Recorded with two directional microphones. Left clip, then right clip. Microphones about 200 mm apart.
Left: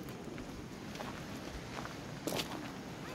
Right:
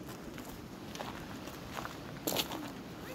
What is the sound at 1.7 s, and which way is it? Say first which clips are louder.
Walk: right 4 dB; 50° right (ahead or behind).